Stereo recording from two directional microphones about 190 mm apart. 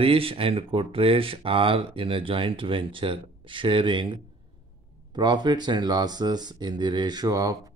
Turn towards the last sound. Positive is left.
turn(degrees=-20)  # may be behind; listen again after turning